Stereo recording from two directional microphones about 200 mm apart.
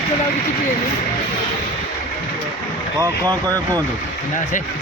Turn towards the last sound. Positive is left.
turn(degrees=-15)  # may be behind; listen again after turning